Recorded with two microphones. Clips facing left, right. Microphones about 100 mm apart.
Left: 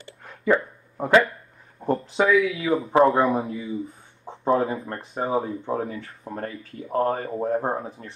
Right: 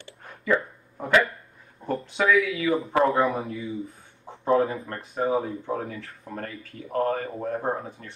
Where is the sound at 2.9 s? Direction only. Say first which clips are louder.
Left 5 dB; 30° left (ahead or behind).